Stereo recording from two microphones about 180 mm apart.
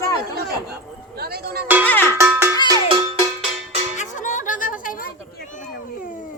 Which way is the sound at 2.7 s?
25° right (ahead or behind).